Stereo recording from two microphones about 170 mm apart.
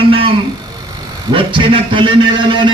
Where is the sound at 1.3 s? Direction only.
30° right (ahead or behind).